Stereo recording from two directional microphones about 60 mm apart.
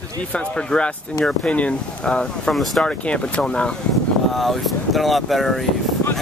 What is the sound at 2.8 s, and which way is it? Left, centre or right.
Speech, centre.